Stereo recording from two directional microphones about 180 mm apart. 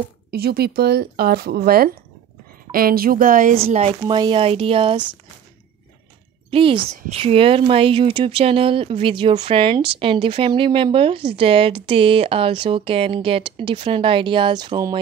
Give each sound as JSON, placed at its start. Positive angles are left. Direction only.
{"t": 0.3, "sound": "speech", "side_deg": -60}
{"t": 3.5, "sound": "speech", "side_deg": -35}
{"t": 6.5, "sound": "speech", "side_deg": -30}